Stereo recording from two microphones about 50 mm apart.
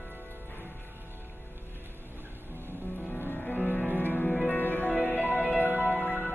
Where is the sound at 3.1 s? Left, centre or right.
Left.